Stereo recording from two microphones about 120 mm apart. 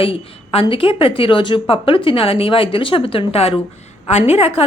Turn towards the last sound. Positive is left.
turn(degrees=55)  # may be behind; listen again after turning